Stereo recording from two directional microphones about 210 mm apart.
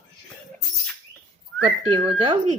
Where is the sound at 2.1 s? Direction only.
25° right (ahead or behind).